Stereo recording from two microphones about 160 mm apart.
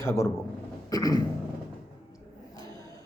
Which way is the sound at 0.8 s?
25° left (ahead or behind).